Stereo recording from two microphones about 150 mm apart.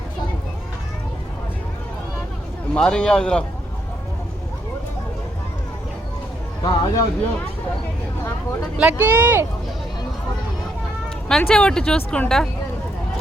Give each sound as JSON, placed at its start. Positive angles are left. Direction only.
{"t": 2.7, "sound": "speech", "side_deg": 5}
{"t": 6.6, "sound": "a sound", "side_deg": 25}
{"t": 8.8, "sound": "speech", "side_deg": -10}
{"t": 11.3, "sound": "speech", "side_deg": 5}